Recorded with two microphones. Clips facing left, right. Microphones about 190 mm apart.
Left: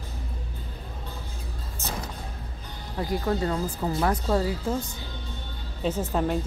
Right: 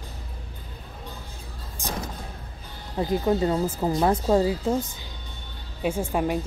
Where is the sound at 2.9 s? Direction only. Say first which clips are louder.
Right 4 dB; 20° right (ahead or behind).